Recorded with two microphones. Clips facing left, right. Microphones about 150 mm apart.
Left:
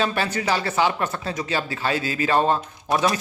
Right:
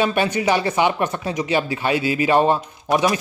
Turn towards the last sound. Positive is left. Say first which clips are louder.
# right 3 dB
turn(degrees=-15)  # may be behind; listen again after turning